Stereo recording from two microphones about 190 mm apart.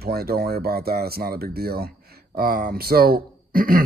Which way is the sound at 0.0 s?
55° right (ahead or behind).